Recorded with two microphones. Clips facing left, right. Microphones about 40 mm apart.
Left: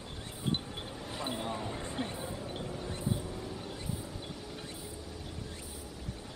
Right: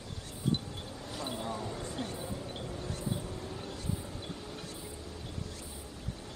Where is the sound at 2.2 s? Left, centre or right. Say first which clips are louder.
Even; centre.